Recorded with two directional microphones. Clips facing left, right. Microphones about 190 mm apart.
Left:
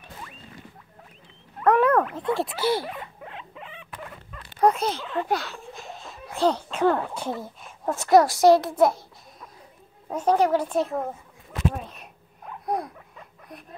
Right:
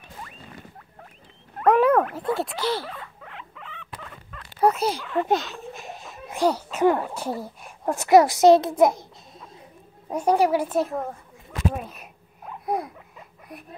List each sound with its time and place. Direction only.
1.6 s wild animals: 10° right (ahead or behind)
2.3 s rodents: 5° left (ahead or behind)
4.6 s speech: 10° right (ahead or behind)
5.1 s a child's voice: 20° right (ahead or behind); by 11.1 s centre (ahead or behind)
11.7 s a sound: 5° right (ahead or behind)